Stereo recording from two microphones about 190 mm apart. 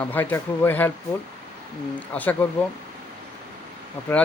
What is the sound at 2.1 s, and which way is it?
Speech, 10° left (ahead or behind).